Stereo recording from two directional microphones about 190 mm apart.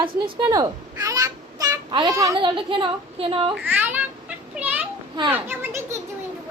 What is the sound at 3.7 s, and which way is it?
Children playing, 10° right (ahead or behind).